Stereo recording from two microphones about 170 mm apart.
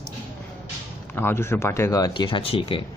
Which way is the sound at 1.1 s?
15° left (ahead or behind).